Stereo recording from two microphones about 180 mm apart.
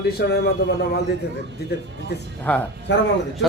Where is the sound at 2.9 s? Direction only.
80° left.